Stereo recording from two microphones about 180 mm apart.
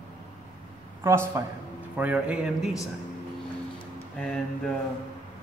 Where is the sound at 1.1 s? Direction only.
15° right (ahead or behind).